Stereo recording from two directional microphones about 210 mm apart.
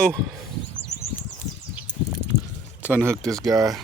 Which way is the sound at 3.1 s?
15° right (ahead or behind).